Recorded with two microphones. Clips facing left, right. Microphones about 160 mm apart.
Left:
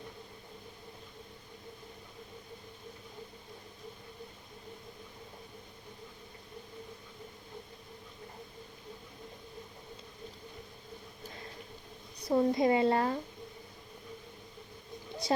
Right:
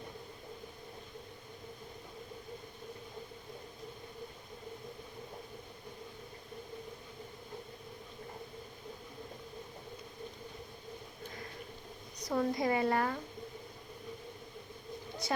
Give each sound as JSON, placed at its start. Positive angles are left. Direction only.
{"t": 12.2, "sound": "a woman's voice", "side_deg": 25}